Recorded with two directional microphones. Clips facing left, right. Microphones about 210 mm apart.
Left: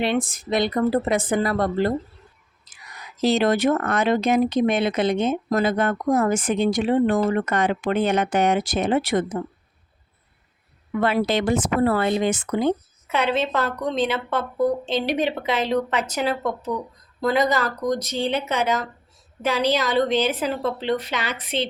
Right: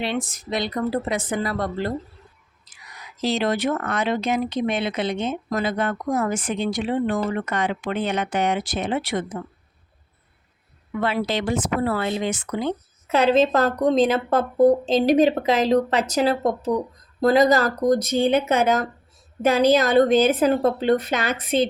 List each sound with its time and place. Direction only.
0.0 s speech: 55° left (ahead or behind)
3.2 s speech: 50° left (ahead or behind)
11.0 s speech: 50° left (ahead or behind)
13.1 s speech: 40° right (ahead or behind)
17.8 s a woman's voice: 50° right (ahead or behind)